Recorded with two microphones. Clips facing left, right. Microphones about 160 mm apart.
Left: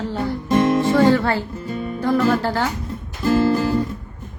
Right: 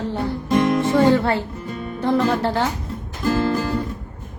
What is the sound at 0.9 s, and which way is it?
A woman's voice, 20° right (ahead or behind).